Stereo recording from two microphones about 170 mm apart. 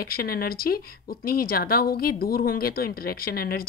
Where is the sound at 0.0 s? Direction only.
60° left (ahead or behind).